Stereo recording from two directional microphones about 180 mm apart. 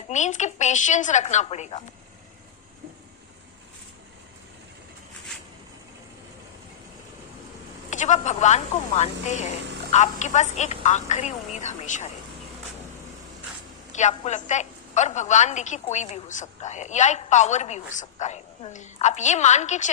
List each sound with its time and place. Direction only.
0.1 s a woman's voice: 40° left (ahead or behind)
7.9 s a woman's voice: 40° left (ahead or behind)
13.9 s a woman's voice: 40° left (ahead or behind)